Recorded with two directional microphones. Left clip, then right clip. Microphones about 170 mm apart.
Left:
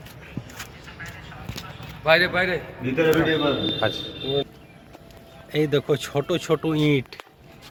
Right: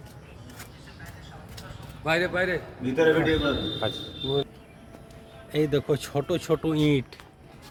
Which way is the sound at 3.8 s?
5° right (ahead or behind).